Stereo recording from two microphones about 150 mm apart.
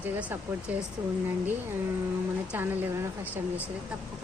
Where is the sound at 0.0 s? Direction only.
10° right (ahead or behind).